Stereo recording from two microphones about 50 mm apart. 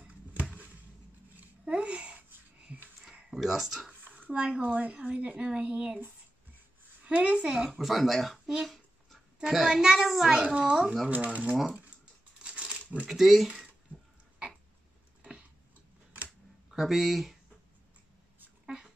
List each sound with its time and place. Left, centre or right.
0.0 s a sound: right
2.1 s a sound: right
3.0 s a sound: centre
4.3 s speech: right
7.1 s speech: right
7.8 s speech: centre
9.4 s a child's voice: centre
10.3 s speech: centre
12.4 s crumpling: right
13.0 s speech: centre
16.7 s speech: centre